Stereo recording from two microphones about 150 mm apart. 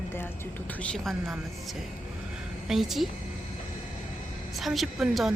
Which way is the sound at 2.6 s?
Centre (ahead or behind).